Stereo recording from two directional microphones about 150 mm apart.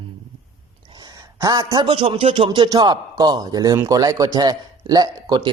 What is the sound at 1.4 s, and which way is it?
A man's voice, 25° right (ahead or behind).